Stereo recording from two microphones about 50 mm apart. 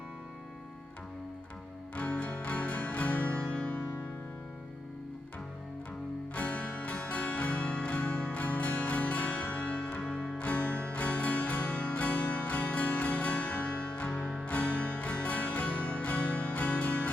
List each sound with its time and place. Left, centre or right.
2.0 s music: left
3.4 s music: left
6.3 s music: left